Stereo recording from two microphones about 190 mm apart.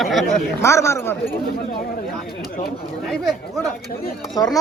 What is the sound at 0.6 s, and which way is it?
Speech, 15° left (ahead or behind).